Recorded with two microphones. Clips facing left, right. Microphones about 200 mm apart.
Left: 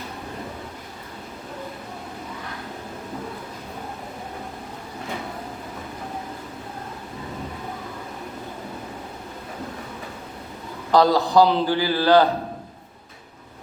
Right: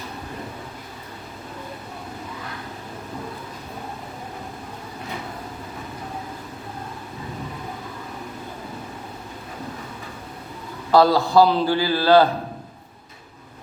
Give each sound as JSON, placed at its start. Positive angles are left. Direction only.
{"t": 10.9, "sound": "a man's voice", "side_deg": 15}